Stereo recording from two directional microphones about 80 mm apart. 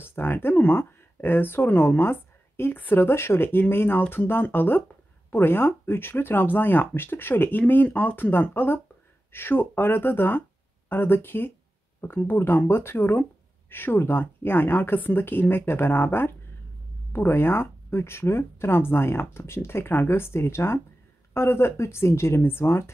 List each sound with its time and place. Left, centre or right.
0.0 s speech: left